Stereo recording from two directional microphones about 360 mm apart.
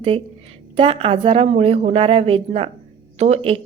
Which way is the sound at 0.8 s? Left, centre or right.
Centre.